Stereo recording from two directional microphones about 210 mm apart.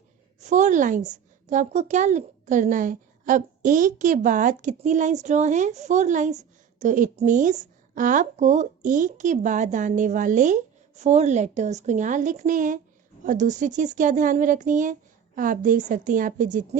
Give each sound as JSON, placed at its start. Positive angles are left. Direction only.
{"t": 0.3, "sound": "a woman's voice", "side_deg": -35}